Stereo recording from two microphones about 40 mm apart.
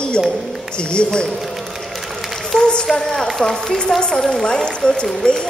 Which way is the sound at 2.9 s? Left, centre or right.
Centre.